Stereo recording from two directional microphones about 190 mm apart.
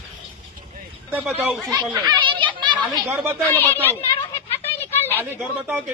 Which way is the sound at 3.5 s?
10° left (ahead or behind).